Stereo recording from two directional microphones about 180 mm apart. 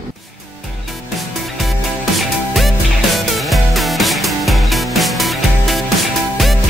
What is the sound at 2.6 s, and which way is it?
Music, centre (ahead or behind).